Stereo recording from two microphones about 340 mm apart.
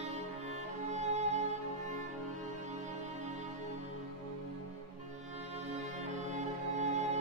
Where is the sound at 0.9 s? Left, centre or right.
Centre.